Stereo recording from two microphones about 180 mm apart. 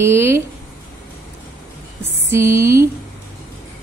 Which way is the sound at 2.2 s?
15° right (ahead or behind).